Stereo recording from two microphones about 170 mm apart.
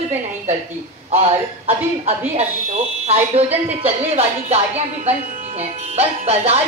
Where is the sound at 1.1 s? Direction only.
35° right (ahead or behind).